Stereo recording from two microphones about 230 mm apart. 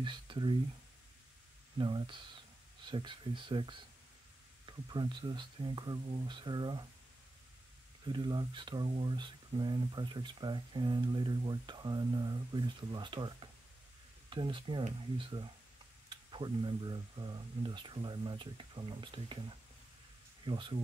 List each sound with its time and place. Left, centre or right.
0.0 s speech: right
1.8 s speech: right
8.0 s speech: centre
20.4 s speech: right